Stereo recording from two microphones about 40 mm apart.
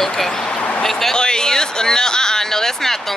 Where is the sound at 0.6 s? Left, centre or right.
Left.